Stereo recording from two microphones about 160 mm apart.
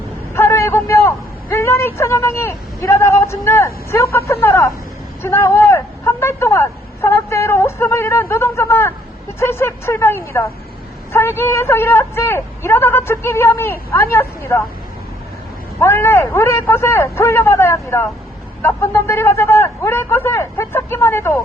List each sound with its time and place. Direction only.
0.3 s a man's voice: 15° left (ahead or behind)
15.8 s a man's voice: 15° left (ahead or behind)